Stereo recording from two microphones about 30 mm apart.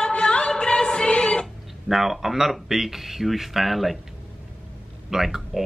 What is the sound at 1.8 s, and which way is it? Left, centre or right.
Speech, centre.